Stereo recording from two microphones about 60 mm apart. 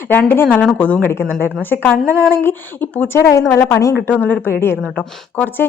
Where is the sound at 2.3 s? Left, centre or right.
Left.